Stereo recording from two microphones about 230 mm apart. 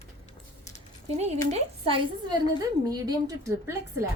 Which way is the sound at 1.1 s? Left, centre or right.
Right.